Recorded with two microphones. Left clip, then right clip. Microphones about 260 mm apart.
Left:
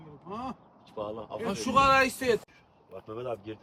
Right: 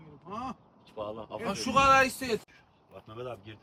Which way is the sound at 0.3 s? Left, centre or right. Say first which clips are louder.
Even; centre.